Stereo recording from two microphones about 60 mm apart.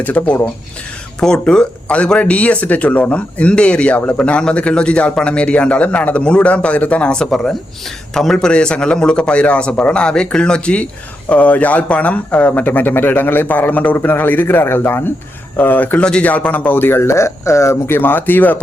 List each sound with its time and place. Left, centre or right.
0.0 s speech: left
1.2 s a man's voice: centre; by 15.1 s left
15.5 s speech: left
16.0 s a man's voice: centre
16.2 s speech: left